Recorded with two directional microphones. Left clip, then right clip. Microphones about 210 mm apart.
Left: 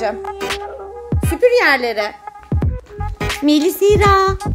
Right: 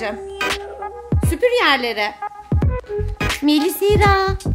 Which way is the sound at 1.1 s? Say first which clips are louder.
Left 4 dB; centre (ahead or behind).